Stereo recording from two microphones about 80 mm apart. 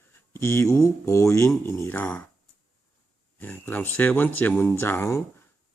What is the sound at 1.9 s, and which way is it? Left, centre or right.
Speech, left.